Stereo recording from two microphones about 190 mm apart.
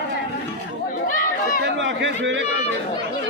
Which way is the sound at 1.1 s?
45° left (ahead or behind).